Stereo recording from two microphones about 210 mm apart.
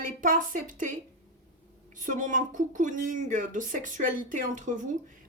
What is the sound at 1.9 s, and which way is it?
Speech, 40° right (ahead or behind).